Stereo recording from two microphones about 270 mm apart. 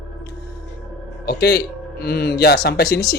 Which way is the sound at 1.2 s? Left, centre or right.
Left.